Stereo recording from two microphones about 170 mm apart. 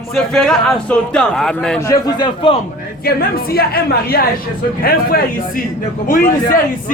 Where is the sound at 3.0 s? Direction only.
65° left (ahead or behind).